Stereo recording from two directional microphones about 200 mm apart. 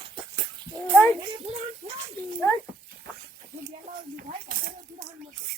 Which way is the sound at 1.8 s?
30° right (ahead or behind).